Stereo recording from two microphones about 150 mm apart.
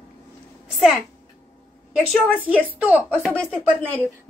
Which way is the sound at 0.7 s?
5° right (ahead or behind).